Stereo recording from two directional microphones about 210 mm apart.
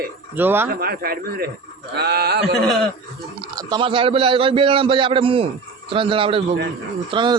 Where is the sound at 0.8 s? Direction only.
45° right (ahead or behind).